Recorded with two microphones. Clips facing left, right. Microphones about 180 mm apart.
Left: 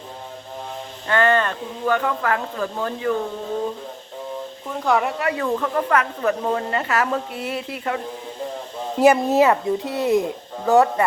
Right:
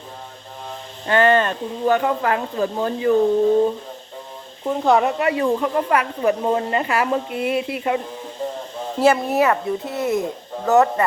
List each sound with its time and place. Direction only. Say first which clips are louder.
1.0 s speech: right 3 dB; 20° right (ahead or behind)
4.6 s speech: right 4 dB; 25° right (ahead or behind)
9.0 s a woman's voice: left 2 dB; 15° left (ahead or behind)